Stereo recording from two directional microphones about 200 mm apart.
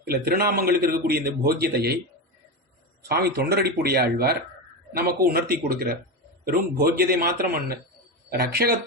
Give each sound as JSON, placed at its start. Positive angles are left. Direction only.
{"t": 0.0, "sound": "a man's voice", "side_deg": -50}
{"t": 3.1, "sound": "a man's voice", "side_deg": -50}